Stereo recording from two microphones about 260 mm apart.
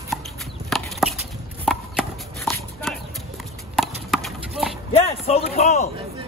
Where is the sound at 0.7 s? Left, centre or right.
Centre.